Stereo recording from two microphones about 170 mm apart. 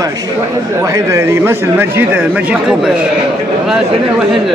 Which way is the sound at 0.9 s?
15° right (ahead or behind).